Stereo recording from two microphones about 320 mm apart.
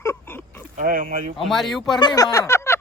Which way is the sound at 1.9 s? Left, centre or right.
Centre.